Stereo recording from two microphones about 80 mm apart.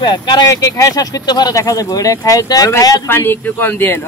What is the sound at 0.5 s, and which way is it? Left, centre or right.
Speech, left.